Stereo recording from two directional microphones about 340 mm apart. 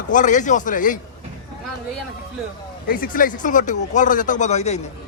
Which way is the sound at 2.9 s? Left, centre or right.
Left.